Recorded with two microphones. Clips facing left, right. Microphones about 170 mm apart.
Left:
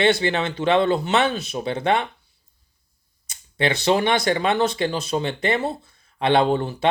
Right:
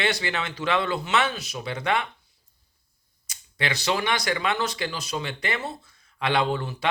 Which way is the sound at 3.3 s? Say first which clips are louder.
Left 7 dB; 25° left (ahead or behind).